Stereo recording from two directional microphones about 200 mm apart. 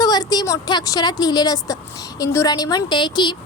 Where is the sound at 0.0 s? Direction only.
20° left (ahead or behind).